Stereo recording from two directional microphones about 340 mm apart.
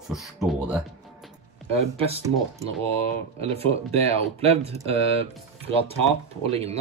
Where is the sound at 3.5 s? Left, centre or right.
Centre.